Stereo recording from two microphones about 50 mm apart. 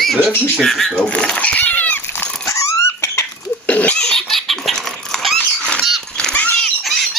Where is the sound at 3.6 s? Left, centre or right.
Left.